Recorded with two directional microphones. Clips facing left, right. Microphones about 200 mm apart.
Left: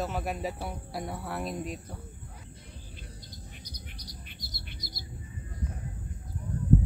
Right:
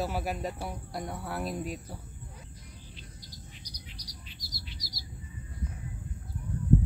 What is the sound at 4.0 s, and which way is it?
Bird, 55° left (ahead or behind).